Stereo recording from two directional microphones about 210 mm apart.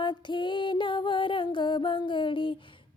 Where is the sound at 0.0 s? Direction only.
20° left (ahead or behind).